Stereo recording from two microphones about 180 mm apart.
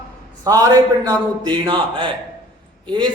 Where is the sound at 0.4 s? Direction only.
20° right (ahead or behind).